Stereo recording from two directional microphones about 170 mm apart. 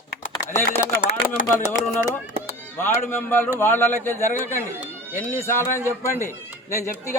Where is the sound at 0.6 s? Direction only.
50° left (ahead or behind).